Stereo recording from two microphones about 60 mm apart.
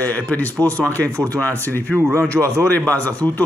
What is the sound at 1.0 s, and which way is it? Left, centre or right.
Speech, right.